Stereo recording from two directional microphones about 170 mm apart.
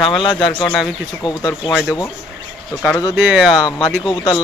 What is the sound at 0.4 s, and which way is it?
Speech, 5° left (ahead or behind).